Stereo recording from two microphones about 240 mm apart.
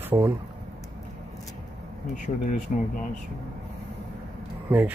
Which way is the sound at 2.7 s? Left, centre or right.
Left.